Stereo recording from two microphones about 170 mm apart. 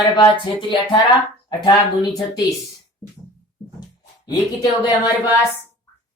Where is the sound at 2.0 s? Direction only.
20° left (ahead or behind).